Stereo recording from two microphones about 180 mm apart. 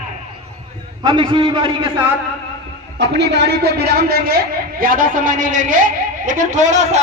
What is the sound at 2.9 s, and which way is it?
A man's voice, 70° right (ahead or behind).